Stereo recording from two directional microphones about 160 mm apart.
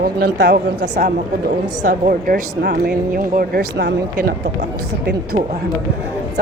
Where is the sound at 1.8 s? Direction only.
55° right (ahead or behind).